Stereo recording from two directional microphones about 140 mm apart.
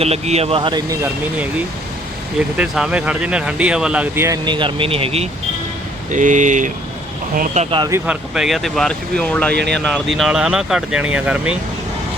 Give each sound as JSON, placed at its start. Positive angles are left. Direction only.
{"t": 0.0, "sound": "speech", "side_deg": -50}
{"t": 2.6, "sound": "speech", "side_deg": -5}
{"t": 4.4, "sound": "speech", "side_deg": -35}
{"t": 6.1, "sound": "speech", "side_deg": -65}
{"t": 8.0, "sound": "speech", "side_deg": -5}
{"t": 9.9, "sound": "speech", "side_deg": -5}